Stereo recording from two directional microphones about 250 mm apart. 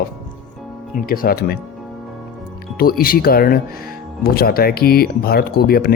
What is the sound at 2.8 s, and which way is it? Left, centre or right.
Speech, left.